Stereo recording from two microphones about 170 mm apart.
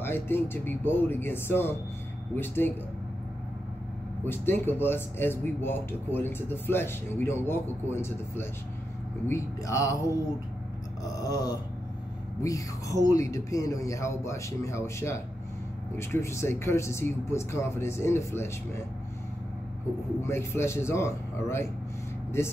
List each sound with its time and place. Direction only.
0.0 s speech: 15° left (ahead or behind)
4.2 s speech: 10° left (ahead or behind)
11.2 s speech: 20° left (ahead or behind)
20.2 s speech: 15° left (ahead or behind)